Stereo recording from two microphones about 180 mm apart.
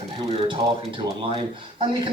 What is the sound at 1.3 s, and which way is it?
Speech, 30° right (ahead or behind).